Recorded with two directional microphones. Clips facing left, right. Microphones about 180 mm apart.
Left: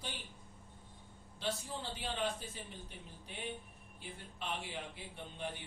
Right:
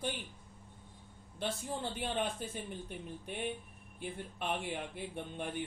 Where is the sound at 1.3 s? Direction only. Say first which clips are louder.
Right 3 dB; 55° right (ahead or behind).